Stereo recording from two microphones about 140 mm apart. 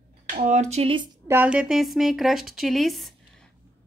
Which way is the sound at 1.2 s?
15° right (ahead or behind).